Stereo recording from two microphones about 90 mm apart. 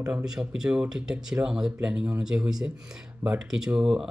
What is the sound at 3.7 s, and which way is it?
Speech, 10° right (ahead or behind).